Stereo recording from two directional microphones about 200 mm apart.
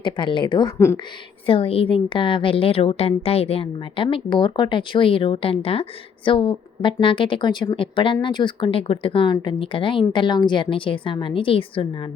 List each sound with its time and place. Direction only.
0.0 s a woman's voice: 25° left (ahead or behind)
1.5 s a woman's voice: 25° left (ahead or behind)